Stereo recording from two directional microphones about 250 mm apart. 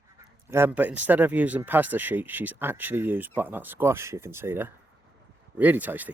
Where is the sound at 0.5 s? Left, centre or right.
Centre.